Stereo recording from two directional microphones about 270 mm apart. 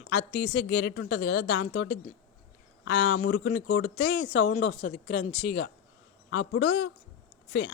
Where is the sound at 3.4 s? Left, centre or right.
Left.